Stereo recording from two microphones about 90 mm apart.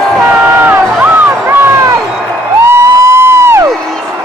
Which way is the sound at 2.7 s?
30° right (ahead or behind).